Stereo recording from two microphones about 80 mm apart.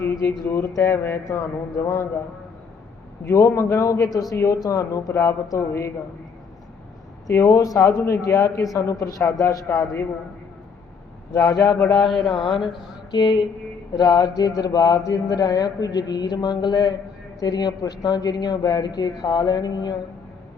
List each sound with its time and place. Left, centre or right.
0.2 s a man's voice: left
3.2 s a man's voice: left
4.3 s speech: left
7.3 s a man's voice: left
9.6 s a man's voice: left
11.3 s speech: left
11.9 s a man's voice: centre
13.1 s a sound: left
13.9 s speech: left